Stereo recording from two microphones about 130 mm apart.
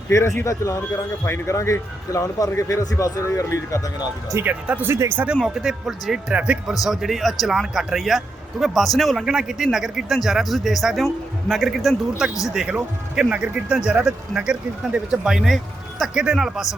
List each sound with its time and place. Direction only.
0.1 s speech: 20° left (ahead or behind)
4.3 s speech: 20° right (ahead or behind); by 16.6 s 5° right (ahead or behind)